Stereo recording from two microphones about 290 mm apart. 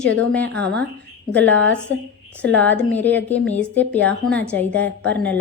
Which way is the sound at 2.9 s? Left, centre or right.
Centre.